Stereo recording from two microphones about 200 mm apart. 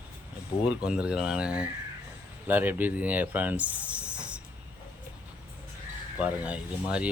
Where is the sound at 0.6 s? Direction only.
5° right (ahead or behind).